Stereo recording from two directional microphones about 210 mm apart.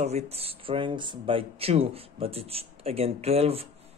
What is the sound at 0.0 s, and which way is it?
Speech, 30° right (ahead or behind).